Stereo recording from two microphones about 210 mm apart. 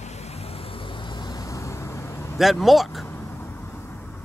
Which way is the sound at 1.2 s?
20° left (ahead or behind).